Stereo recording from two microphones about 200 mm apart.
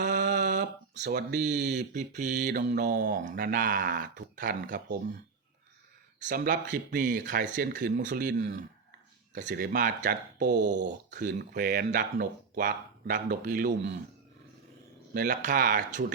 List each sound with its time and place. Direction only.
0.0 s a sound: 45° right (ahead or behind)
1.0 s speech: 50° right (ahead or behind)
1.8 s speech: 40° right (ahead or behind)
6.2 s speech: 45° right (ahead or behind)
11.3 s speech: 50° right (ahead or behind)
15.1 s speech: 40° right (ahead or behind)